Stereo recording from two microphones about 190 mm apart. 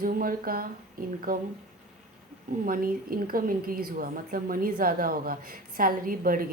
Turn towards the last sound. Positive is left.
turn(degrees=-45)  # may be behind; listen again after turning